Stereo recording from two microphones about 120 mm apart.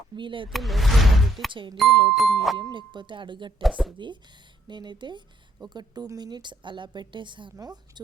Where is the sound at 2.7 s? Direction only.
40° right (ahead or behind).